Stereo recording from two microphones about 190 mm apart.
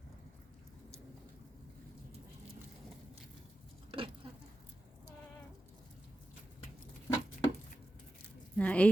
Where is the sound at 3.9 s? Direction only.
30° right (ahead or behind).